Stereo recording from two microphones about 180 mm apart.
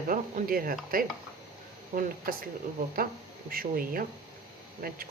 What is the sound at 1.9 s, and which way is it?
Speech, 50° right (ahead or behind).